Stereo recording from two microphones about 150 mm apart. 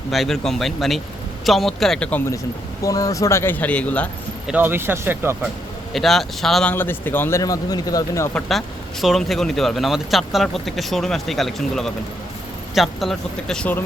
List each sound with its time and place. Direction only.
0.1 s speech: centre (ahead or behind)
2.8 s speech: 20° left (ahead or behind)
4.4 s speech: 10° right (ahead or behind)
5.9 s speech: centre (ahead or behind)
6.7 s speech: 15° left (ahead or behind)
8.3 s speech: 5° left (ahead or behind)